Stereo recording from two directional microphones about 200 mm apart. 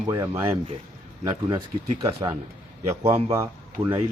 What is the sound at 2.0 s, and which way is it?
Speech, 25° right (ahead or behind).